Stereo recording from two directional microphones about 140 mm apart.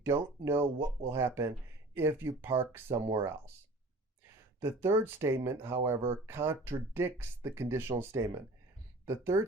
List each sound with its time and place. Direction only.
0.0 s speech: 20° right (ahead or behind)
4.8 s speech: 15° right (ahead or behind)